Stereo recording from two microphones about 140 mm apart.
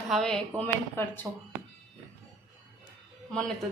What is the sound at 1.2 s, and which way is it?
Speech, 10° right (ahead or behind).